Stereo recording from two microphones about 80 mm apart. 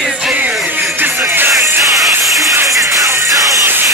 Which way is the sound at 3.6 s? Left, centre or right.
Right.